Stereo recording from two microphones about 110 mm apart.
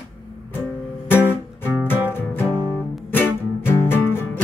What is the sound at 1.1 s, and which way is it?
Music, 20° left (ahead or behind).